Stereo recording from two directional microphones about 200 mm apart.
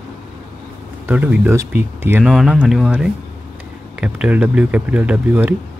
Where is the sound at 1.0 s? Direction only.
5° right (ahead or behind).